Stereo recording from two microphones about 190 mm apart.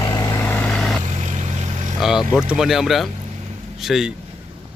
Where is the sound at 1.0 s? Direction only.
40° right (ahead or behind).